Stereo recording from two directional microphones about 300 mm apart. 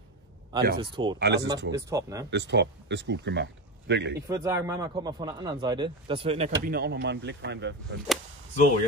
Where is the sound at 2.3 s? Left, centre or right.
Right.